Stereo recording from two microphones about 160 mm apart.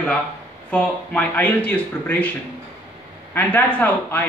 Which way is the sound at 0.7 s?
10° left (ahead or behind).